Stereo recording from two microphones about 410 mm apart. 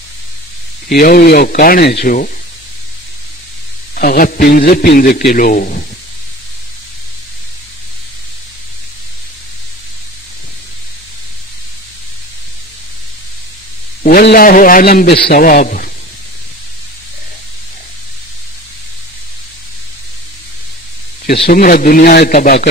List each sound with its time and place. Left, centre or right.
0.8 s a man's voice: left
3.9 s a man's voice: left
14.0 s a man's voice: left
21.3 s a man's voice: left